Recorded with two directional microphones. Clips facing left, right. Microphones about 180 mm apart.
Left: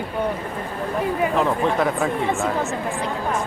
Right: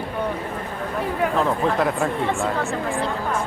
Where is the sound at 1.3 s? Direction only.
Centre (ahead or behind).